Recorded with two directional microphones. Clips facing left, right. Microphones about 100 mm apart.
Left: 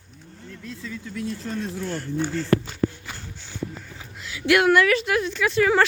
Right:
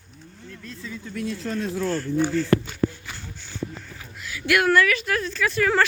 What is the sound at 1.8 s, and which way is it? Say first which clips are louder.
Speech: right 4 dB; 20° left (ahead or behind).